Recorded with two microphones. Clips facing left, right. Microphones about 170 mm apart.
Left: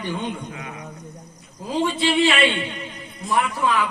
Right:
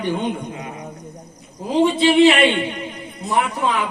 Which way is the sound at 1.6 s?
20° right (ahead or behind).